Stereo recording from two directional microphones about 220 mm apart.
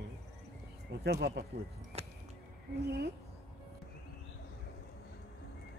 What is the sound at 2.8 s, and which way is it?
Speech, 50° right (ahead or behind).